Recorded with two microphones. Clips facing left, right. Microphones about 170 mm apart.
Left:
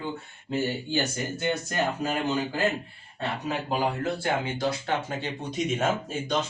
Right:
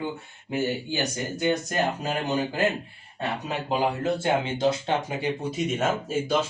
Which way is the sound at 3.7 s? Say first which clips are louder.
Right 4 dB; 20° right (ahead or behind).